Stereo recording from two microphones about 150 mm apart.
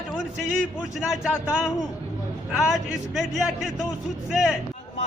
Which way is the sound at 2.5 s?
Centre (ahead or behind).